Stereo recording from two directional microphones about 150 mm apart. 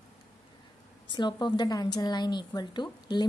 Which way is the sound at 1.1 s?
30° left (ahead or behind).